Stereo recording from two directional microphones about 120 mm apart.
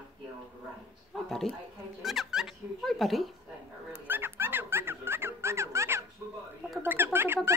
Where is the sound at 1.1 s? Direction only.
5° left (ahead or behind).